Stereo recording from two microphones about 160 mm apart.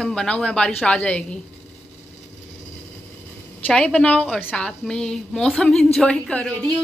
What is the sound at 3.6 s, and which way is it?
A woman's voice, 10° left (ahead or behind).